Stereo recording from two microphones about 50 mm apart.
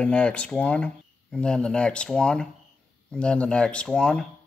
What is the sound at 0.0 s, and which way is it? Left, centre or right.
Speech, left.